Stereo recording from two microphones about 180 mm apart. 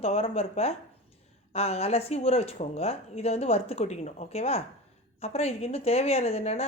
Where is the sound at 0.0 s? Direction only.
35° left (ahead or behind).